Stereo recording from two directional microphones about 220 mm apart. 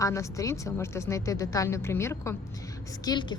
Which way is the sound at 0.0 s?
15° left (ahead or behind).